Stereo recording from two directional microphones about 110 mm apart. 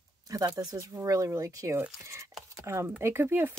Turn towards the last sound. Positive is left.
turn(degrees=-20)  # may be behind; listen again after turning